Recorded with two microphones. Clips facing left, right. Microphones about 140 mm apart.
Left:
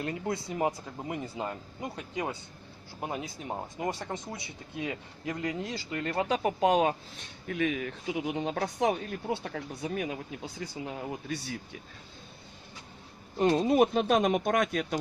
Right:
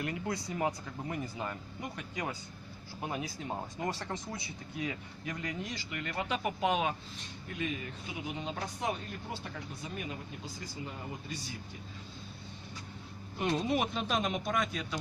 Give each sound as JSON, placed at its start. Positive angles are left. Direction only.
{"t": 0.0, "sound": "speech", "side_deg": 25}
{"t": 7.4, "sound": "speech", "side_deg": 75}
{"t": 13.7, "sound": "speech", "side_deg": 50}